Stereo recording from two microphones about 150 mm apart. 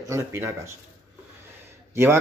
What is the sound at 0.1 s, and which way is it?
Speech, 20° right (ahead or behind).